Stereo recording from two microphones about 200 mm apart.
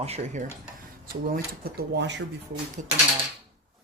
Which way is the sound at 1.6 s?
55° right (ahead or behind).